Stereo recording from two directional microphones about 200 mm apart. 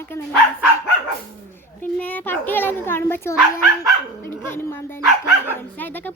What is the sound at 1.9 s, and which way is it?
Speech, 10° left (ahead or behind).